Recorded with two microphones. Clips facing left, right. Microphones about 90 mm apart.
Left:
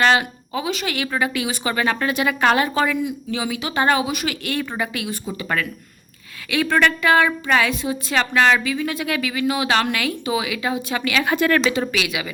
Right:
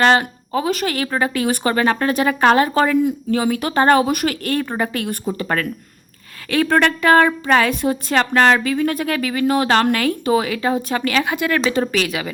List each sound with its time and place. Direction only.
0.0 s speech: 40° right (ahead or behind)
7.7 s speech: 50° right (ahead or behind)
8.2 s speech: 40° right (ahead or behind)
11.3 s speech: 15° right (ahead or behind)
11.7 s speech: 40° right (ahead or behind)